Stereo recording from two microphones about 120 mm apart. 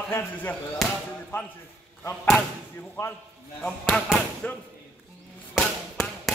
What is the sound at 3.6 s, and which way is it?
Speech, 10° left (ahead or behind).